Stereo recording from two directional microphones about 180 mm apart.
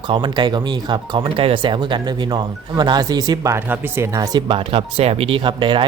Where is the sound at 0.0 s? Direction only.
25° right (ahead or behind).